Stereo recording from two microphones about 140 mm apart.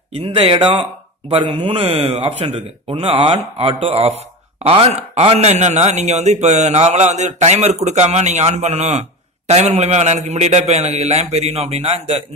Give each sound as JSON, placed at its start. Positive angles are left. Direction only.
{"t": 0.1, "sound": "speech", "side_deg": -40}